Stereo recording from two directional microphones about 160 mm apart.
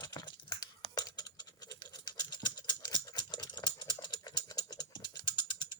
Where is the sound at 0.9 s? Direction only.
25° left (ahead or behind).